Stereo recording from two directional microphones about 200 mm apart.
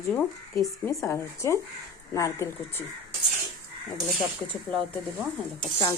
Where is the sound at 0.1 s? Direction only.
5° left (ahead or behind).